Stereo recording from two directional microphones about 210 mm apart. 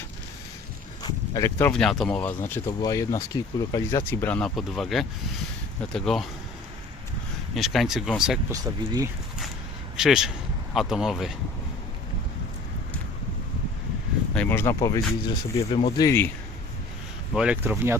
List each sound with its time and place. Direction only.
1.0 s speech: 20° left (ahead or behind); by 6.2 s centre (ahead or behind)
7.5 s speech: centre (ahead or behind)
8.4 s speech: 15° right (ahead or behind)
10.0 s speech: centre (ahead or behind)
14.3 s speech: 10° left (ahead or behind)
17.3 s speech: 5° right (ahead or behind)